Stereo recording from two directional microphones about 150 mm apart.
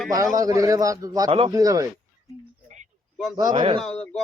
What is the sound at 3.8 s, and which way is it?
Speech, 5° left (ahead or behind).